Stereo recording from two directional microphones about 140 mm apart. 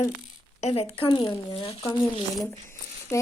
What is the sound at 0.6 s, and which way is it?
Speech, 45° left (ahead or behind).